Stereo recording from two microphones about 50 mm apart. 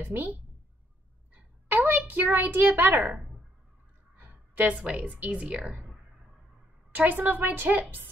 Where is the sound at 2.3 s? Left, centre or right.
Right.